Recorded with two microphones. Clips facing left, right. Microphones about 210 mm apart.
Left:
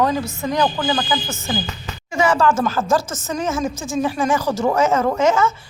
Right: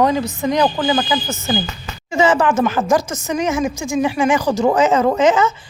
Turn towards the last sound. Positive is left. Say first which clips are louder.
# right 3 dB
turn(degrees=-20)  # may be behind; listen again after turning